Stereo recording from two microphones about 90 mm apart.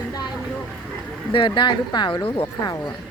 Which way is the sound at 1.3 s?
65° left (ahead or behind).